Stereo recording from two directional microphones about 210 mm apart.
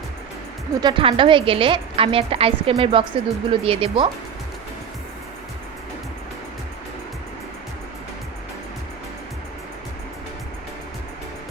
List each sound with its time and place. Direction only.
0.8 s a woman's voice: 20° right (ahead or behind)